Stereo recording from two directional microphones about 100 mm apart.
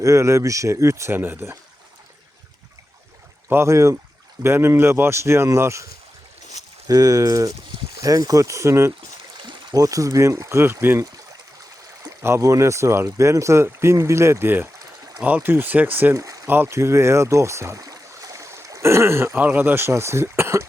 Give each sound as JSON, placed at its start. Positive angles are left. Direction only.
{"t": 0.0, "sound": "speech", "side_deg": -30}
{"t": 3.5, "sound": "speech", "side_deg": -25}
{"t": 9.4, "sound": "a sound", "side_deg": -50}
{"t": 9.7, "sound": "speech", "side_deg": -35}
{"t": 12.0, "sound": "speech", "side_deg": -30}
{"t": 16.1, "sound": "a sound", "side_deg": -35}
{"t": 16.5, "sound": "speech", "side_deg": -25}